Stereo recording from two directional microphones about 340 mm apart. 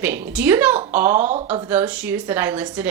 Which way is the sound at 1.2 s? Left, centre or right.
Right.